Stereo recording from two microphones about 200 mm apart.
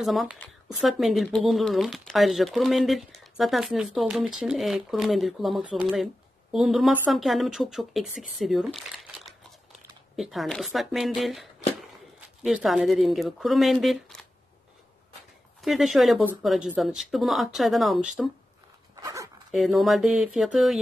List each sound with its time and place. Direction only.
0.0 s speech: centre (ahead or behind)
12.4 s speech: centre (ahead or behind)
15.6 s speech: centre (ahead or behind)
18.9 s dog: 15° right (ahead or behind)
19.5 s speech: centre (ahead or behind)